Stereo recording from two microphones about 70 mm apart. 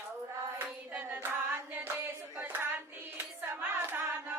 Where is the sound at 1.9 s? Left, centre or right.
Right.